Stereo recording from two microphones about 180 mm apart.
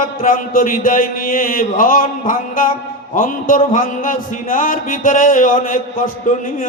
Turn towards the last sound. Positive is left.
turn(degrees=50)  # may be behind; listen again after turning